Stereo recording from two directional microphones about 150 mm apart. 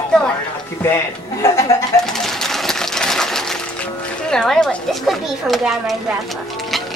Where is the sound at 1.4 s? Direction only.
20° left (ahead or behind).